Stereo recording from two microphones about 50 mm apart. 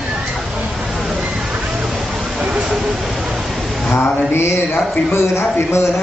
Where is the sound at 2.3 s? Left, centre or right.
Right.